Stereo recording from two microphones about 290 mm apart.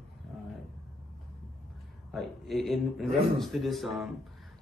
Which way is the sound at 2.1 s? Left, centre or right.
Centre.